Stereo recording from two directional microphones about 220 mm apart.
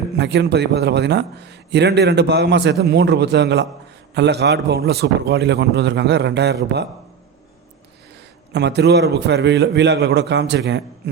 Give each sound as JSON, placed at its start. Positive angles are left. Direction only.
{"t": 0.2, "sound": "a man's voice", "side_deg": -50}
{"t": 8.5, "sound": "a man's voice", "side_deg": -50}